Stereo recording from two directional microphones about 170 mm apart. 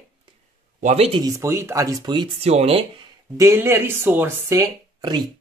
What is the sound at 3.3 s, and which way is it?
Speech, 20° right (ahead or behind).